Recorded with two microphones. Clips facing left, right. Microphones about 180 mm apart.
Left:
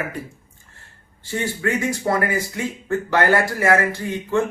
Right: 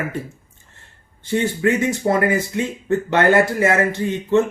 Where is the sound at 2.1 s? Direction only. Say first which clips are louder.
Right 4 dB; 20° right (ahead or behind).